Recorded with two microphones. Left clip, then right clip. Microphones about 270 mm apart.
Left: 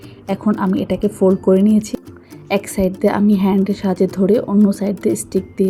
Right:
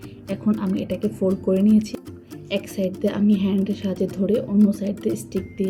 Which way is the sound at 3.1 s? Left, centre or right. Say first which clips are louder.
Left 7 dB; left.